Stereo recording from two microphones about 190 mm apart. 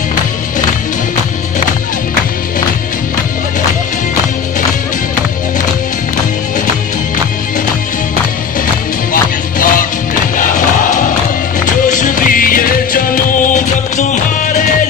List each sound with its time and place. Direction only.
9.1 s music: 45° left (ahead or behind)